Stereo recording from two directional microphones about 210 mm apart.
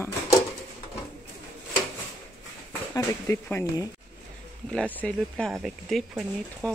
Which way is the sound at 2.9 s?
15° left (ahead or behind).